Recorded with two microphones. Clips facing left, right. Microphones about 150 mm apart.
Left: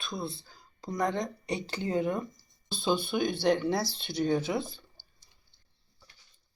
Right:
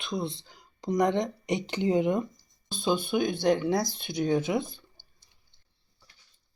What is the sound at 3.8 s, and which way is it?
Speech, 50° right (ahead or behind).